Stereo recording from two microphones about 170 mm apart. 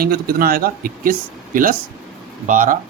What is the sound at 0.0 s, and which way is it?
Speech, 60° right (ahead or behind).